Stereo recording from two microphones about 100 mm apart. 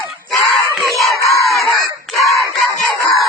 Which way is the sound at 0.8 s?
Centre (ahead or behind).